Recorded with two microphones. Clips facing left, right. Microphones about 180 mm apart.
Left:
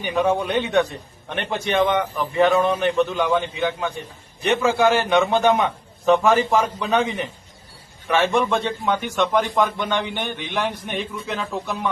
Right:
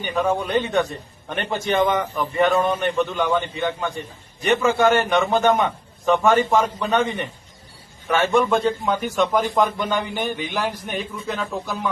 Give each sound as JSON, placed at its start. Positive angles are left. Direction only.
{"t": 0.0, "sound": "a man's voice", "side_deg": 0}
{"t": 8.1, "sound": "a man's voice", "side_deg": 0}